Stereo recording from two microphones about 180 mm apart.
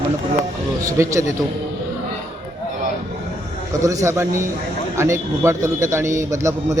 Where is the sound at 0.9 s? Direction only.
15° right (ahead or behind).